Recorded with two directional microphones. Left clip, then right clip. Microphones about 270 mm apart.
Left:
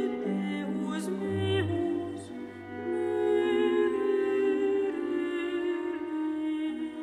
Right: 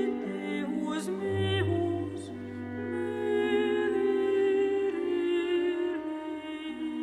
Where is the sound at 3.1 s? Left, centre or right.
Centre.